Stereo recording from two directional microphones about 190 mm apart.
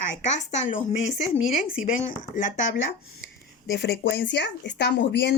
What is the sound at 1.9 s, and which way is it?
Speech, 45° left (ahead or behind).